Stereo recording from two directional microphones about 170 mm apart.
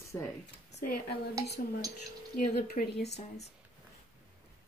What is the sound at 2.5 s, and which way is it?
Speech, 65° left (ahead or behind).